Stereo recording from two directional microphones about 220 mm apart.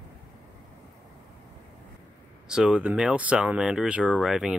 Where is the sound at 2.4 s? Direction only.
5° right (ahead or behind).